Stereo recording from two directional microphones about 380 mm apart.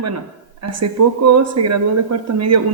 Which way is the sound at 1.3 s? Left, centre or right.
Right.